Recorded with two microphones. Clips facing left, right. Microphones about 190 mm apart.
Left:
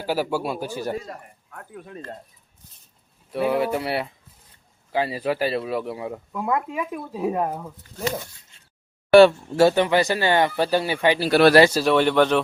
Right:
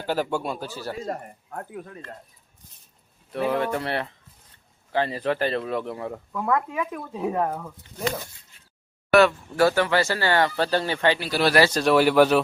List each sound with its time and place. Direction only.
0.0 s speech: 10° left (ahead or behind)
1.0 s speech: 45° right (ahead or behind)
3.3 s speech: 10° left (ahead or behind)
9.1 s speech: 30° left (ahead or behind); by 11.2 s 10° left (ahead or behind)
11.3 s speech: 60° left (ahead or behind)
11.6 s speech: 5° left (ahead or behind)